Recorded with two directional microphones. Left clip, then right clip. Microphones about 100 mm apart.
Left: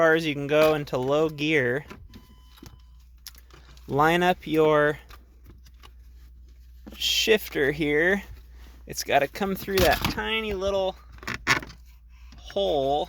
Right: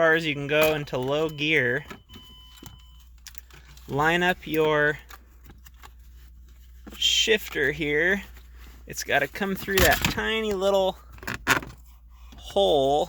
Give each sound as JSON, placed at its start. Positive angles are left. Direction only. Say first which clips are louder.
{"t": 0.0, "sound": "speech", "louder": "even", "side_deg": 30}
{"t": 3.3, "sound": "typing", "louder": "even", "side_deg": 40}
{"t": 3.8, "sound": "speech", "louder": "left 2 dB", "side_deg": 35}
{"t": 6.9, "sound": "speech", "louder": "right 1 dB", "side_deg": 55}
{"t": 10.2, "sound": "speech", "louder": "even", "side_deg": -20}
{"t": 10.6, "sound": "speech", "louder": "right 7 dB", "side_deg": -45}
{"t": 12.4, "sound": "speech", "louder": "right 4 dB", "side_deg": -25}